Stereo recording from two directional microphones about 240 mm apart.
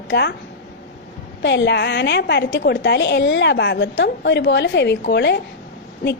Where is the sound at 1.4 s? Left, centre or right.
Left.